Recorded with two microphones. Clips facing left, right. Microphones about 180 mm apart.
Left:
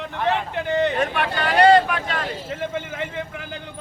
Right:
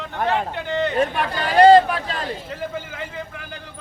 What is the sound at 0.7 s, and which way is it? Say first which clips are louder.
Speech: left 3 dB; 20° left (ahead or behind).